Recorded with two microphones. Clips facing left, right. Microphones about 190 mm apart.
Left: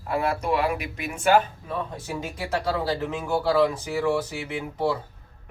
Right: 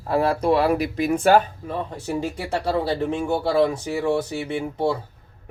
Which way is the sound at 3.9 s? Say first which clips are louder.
Right 2 dB; 25° right (ahead or behind).